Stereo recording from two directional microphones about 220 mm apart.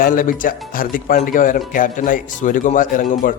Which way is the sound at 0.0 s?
40° left (ahead or behind).